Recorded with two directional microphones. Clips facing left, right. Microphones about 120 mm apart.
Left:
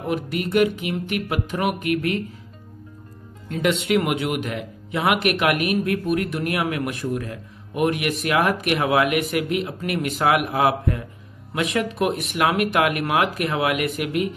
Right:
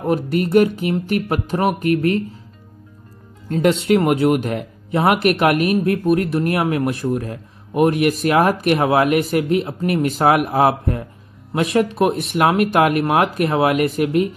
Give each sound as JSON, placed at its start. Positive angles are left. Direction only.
{"t": 0.0, "sound": "speech", "side_deg": -40}
{"t": 3.4, "sound": "speech", "side_deg": -35}